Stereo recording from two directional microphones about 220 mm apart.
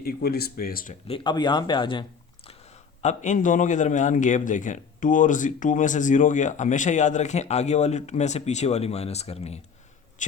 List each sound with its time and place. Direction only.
0.0 s speech: 45° left (ahead or behind)
1.0 s speech: 25° left (ahead or behind)
3.0 s a man's voice: 35° left (ahead or behind)